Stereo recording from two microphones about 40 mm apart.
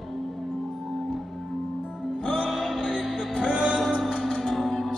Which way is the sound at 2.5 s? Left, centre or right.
Centre.